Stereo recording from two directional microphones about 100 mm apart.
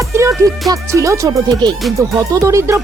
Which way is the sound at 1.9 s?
30° right (ahead or behind).